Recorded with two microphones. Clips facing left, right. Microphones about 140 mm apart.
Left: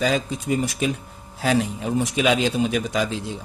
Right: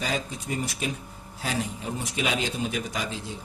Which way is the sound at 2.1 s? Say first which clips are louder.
Left 7 dB; 90° left.